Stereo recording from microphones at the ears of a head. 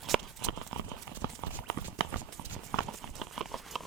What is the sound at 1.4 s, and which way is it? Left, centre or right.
Clip-clop, right.